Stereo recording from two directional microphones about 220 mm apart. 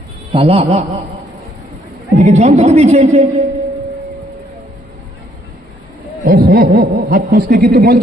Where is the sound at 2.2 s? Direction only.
30° right (ahead or behind).